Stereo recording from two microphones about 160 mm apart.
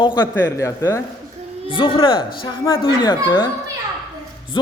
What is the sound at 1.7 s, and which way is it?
Speech, 35° left (ahead or behind).